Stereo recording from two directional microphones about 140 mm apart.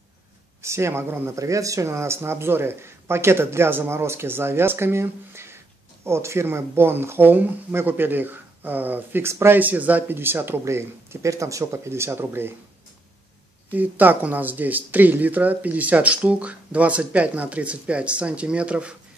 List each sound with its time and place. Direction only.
0.6 s speech: 20° right (ahead or behind)
13.7 s speech: 10° right (ahead or behind)